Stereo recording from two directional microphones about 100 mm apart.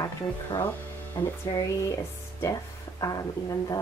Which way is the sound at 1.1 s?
35° left (ahead or behind).